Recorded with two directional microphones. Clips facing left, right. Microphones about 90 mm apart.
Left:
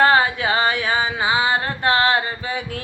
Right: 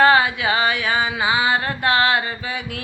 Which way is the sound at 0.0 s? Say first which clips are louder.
Right 1 dB; 35° left (ahead or behind).